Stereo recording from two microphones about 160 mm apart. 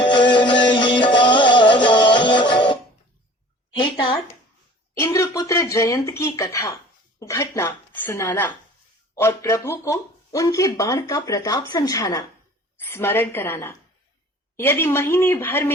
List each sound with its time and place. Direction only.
0.0 s music: 30° left (ahead or behind)
4.9 s speech: 15° left (ahead or behind)